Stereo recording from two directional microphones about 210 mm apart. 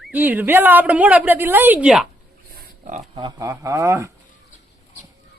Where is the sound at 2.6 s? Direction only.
40° right (ahead or behind).